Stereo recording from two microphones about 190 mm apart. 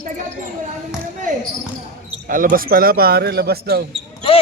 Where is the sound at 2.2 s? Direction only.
45° right (ahead or behind).